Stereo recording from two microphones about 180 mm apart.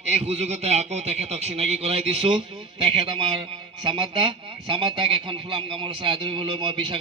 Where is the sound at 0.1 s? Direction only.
35° right (ahead or behind).